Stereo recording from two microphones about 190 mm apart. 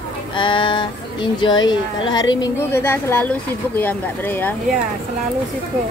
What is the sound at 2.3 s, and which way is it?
Speech, 10° left (ahead or behind).